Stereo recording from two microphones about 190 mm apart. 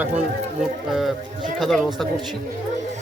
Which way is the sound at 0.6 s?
Centre (ahead or behind).